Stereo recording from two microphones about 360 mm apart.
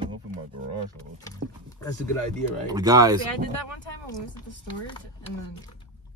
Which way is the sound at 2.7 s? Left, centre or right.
Centre.